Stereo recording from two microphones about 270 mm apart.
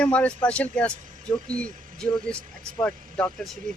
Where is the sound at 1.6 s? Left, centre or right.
Right.